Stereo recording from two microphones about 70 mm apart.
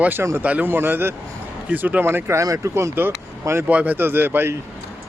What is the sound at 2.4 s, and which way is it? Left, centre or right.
Speech, right.